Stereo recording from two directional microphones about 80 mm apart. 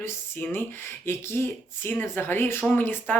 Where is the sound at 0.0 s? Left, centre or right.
Left.